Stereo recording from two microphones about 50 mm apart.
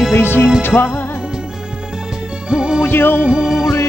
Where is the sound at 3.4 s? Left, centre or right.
Centre.